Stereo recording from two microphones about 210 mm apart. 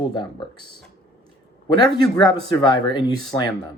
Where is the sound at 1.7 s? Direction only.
20° left (ahead or behind).